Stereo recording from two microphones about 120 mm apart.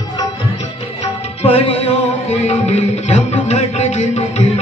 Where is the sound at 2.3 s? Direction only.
65° left (ahead or behind).